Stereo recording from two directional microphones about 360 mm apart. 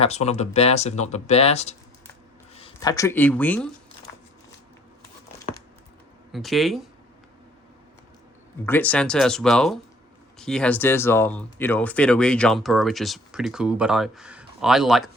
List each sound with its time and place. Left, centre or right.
0.0 s speech: centre
6.3 s speech: centre
8.6 s speech: centre